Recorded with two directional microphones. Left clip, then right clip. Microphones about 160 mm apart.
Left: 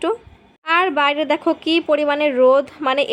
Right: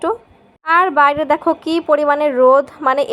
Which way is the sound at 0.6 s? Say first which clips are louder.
Right 5 dB; 10° left (ahead or behind).